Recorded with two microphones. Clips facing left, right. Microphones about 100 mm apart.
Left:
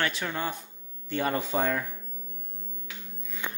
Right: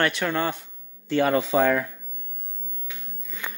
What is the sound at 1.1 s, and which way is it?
Speech, 90° right.